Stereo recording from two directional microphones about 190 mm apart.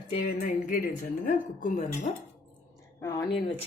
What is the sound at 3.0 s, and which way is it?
Speech, 15° left (ahead or behind).